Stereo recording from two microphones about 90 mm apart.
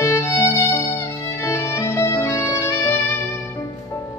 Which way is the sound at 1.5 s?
30° left (ahead or behind).